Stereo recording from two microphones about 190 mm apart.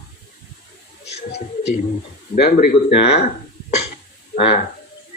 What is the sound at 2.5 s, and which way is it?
Speech, 55° left (ahead or behind).